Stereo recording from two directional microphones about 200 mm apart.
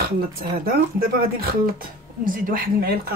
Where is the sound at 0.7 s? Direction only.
45° right (ahead or behind).